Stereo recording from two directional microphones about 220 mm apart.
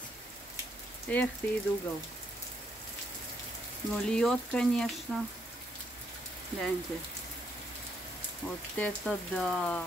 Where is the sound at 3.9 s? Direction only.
5° left (ahead or behind).